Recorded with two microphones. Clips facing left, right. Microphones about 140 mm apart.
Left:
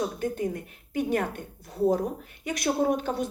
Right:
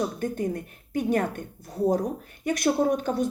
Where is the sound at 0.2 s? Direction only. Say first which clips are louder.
Right 1 dB; 45° right (ahead or behind).